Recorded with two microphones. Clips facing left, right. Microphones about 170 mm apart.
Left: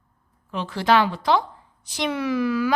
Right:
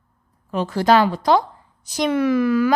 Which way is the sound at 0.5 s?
45° right (ahead or behind).